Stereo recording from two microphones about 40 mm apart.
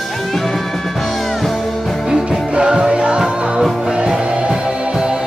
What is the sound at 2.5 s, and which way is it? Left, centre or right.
Music, right.